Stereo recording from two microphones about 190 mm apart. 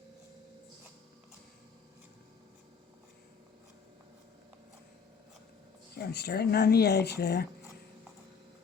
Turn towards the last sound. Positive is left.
turn(degrees=60)  # may be behind; listen again after turning